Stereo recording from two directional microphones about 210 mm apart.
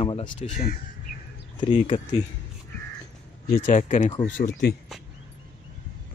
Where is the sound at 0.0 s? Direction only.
25° left (ahead or behind).